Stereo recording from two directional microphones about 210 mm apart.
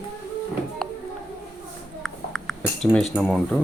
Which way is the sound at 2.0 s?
Centre (ahead or behind).